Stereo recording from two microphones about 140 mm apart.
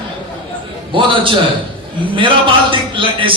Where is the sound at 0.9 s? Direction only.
35° right (ahead or behind).